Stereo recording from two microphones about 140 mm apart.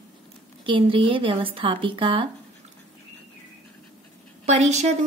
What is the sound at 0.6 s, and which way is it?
Speech, 40° right (ahead or behind).